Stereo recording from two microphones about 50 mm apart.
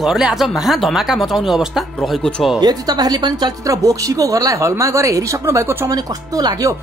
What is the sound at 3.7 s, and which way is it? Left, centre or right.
A woman's voice, right.